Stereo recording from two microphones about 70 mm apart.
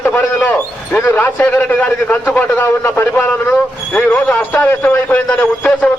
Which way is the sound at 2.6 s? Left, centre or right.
Left.